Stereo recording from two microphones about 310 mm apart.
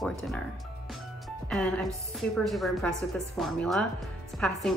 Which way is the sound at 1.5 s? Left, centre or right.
Centre.